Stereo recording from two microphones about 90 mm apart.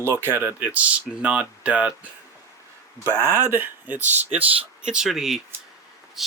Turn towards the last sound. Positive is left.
turn(degrees=-5)  # may be behind; listen again after turning